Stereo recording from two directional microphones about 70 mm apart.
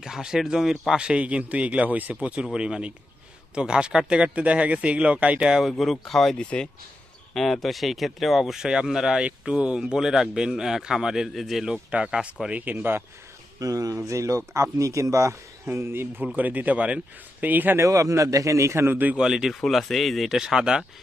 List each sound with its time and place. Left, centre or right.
0.0 s speech: centre
5.7 s speech: centre
7.3 s speech: centre
11.7 s speech: centre
13.6 s a man's voice: right
17.7 s speech: right
19.1 s speech: centre